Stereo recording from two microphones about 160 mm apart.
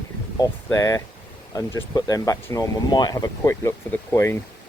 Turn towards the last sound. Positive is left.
turn(degrees=15)  # may be behind; listen again after turning